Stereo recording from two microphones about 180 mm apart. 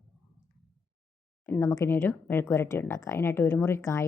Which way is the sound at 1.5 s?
15° left (ahead or behind).